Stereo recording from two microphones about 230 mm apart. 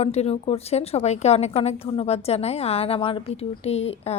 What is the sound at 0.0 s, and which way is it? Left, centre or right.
A woman's voice, left.